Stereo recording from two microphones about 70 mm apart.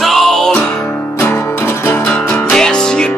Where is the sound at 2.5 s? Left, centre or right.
Centre.